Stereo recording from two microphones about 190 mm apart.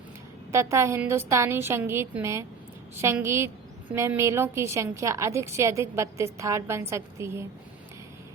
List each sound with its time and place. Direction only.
0.5 s a woman's voice: 15° right (ahead or behind)